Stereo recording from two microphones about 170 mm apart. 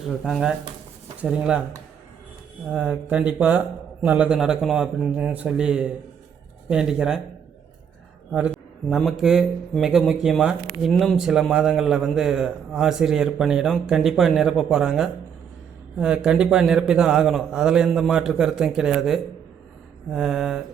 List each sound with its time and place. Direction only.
0.3 s a man's voice: centre (ahead or behind)
2.6 s a man's voice: 5° right (ahead or behind)
8.3 s a sound: 5° right (ahead or behind)
9.2 s a man's voice: centre (ahead or behind)